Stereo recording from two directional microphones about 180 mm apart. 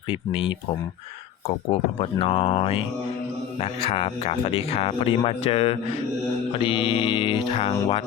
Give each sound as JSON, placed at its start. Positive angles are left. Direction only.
{"t": 0.1, "sound": "speech", "side_deg": 30}
{"t": 1.5, "sound": "speech", "side_deg": 35}
{"t": 6.5, "sound": "mantra", "side_deg": 30}